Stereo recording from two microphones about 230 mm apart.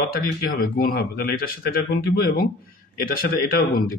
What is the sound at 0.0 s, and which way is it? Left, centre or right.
Speech, left.